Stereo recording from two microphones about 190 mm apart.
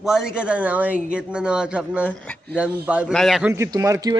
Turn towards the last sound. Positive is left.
turn(degrees=-20)  # may be behind; listen again after turning